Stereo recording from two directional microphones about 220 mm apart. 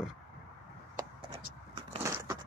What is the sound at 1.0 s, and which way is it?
Vehicle, 25° right (ahead or behind).